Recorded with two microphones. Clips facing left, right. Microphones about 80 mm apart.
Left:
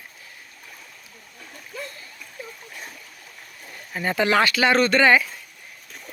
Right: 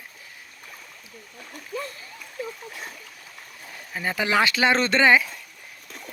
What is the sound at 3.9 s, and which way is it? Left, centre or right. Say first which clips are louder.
Speech: left 3 dB; centre.